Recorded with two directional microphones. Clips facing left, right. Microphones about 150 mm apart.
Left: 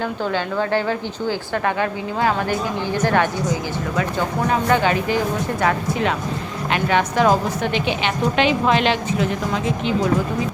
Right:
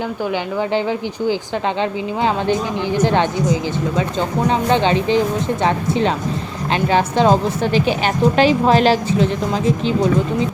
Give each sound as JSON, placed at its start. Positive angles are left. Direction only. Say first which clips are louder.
{"t": 0.7, "sound": "a woman's voice", "louder": "right 2 dB", "side_deg": -15}